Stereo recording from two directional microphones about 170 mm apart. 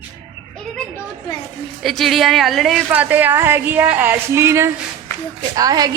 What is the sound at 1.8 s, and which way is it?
A woman's voice, centre (ahead or behind).